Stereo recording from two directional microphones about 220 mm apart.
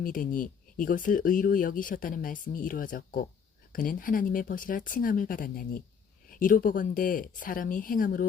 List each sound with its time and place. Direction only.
0.0 s speech: 40° left (ahead or behind)